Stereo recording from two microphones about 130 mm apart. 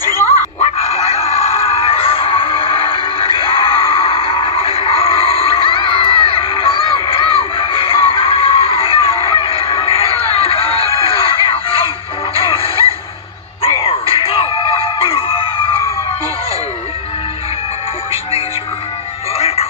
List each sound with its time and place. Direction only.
0.6 s music: 55° left (ahead or behind)
19.3 s music: 55° left (ahead or behind)